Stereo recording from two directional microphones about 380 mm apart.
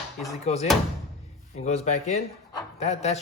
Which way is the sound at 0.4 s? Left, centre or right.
Centre.